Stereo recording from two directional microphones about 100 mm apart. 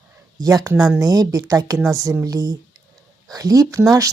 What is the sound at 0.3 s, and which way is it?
Speech, 35° right (ahead or behind).